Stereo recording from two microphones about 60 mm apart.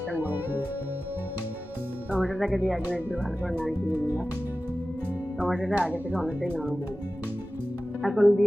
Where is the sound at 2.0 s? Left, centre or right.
Right.